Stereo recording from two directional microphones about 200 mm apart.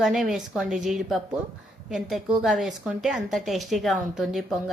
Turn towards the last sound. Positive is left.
turn(degrees=0)  # may be behind; listen again after turning